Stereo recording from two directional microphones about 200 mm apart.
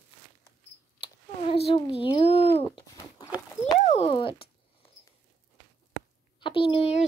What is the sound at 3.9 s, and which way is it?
Speech, 30° left (ahead or behind).